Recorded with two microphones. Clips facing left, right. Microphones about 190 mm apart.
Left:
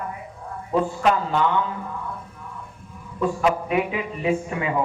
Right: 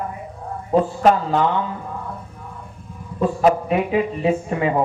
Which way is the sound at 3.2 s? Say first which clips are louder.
Right 4 dB; 35° right (ahead or behind).